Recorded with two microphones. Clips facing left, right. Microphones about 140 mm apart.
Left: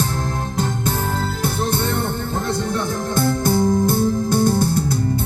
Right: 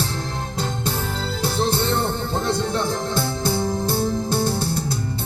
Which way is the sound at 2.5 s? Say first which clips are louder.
Even; 25° right (ahead or behind).